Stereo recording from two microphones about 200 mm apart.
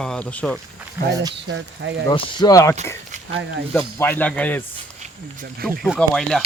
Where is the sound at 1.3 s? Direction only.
60° right (ahead or behind).